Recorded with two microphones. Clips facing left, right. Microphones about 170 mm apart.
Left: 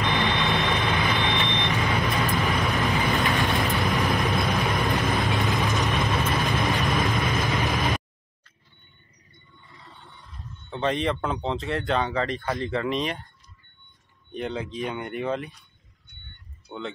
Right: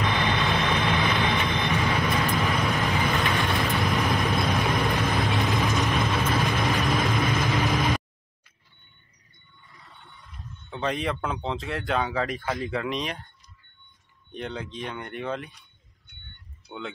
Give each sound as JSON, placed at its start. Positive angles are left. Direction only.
{"t": 0.2, "sound": "vehicle", "side_deg": 0}
{"t": 0.6, "sound": "vehicle", "side_deg": 20}
{"t": 1.3, "sound": "vehicle", "side_deg": 0}
{"t": 10.7, "sound": "speech", "side_deg": 0}
{"t": 14.3, "sound": "speech", "side_deg": 0}
{"t": 16.6, "sound": "speech", "side_deg": 0}